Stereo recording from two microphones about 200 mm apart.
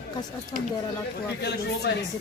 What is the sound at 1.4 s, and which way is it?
Speech, 55° left (ahead or behind).